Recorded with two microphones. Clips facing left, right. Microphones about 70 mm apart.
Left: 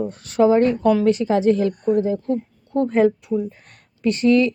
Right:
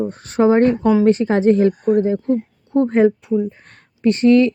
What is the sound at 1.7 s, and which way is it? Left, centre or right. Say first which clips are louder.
Speech: right 3 dB; right.